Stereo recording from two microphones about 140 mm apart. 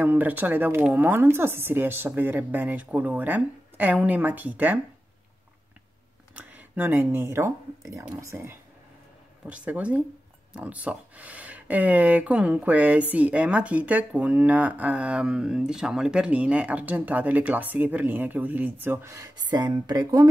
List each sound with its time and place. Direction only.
0.0 s speech: 10° right (ahead or behind)
6.3 s speech: 10° right (ahead or behind)
9.5 s speech: 10° right (ahead or behind); by 20.2 s 30° right (ahead or behind)